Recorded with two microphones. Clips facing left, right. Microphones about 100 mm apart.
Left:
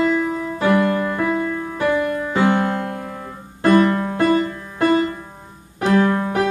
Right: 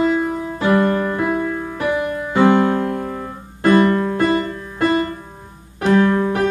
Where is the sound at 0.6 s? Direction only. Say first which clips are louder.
Right 1 dB; 25° right (ahead or behind).